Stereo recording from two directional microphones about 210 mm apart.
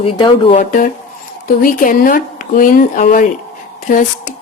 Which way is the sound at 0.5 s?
40° left (ahead or behind).